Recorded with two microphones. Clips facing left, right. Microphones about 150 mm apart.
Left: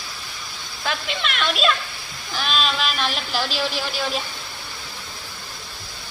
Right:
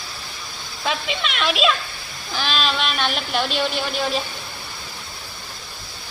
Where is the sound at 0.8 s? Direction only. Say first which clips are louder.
Right 2 dB; centre (ahead or behind).